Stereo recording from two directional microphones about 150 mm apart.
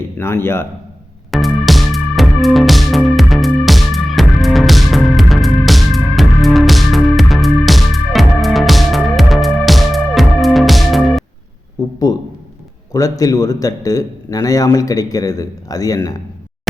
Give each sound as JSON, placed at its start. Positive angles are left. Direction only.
{"t": 0.2, "sound": "a man's voice", "side_deg": 15}
{"t": 1.3, "sound": "music", "side_deg": 0}
{"t": 12.1, "sound": "a man's voice", "side_deg": 25}